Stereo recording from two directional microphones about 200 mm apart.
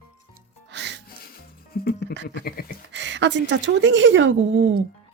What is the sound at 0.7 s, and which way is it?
Music, 60° right (ahead or behind).